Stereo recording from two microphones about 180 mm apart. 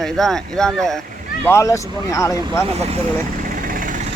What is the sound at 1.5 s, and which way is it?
Speech, 15° left (ahead or behind).